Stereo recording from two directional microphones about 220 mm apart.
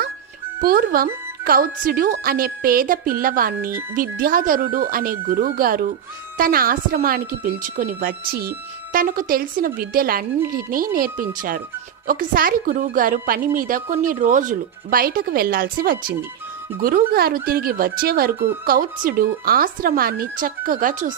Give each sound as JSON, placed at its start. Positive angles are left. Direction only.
{"t": 0.6, "sound": "a woman's voice", "side_deg": -40}